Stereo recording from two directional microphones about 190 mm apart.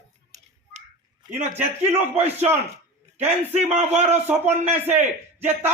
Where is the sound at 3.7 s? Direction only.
35° right (ahead or behind).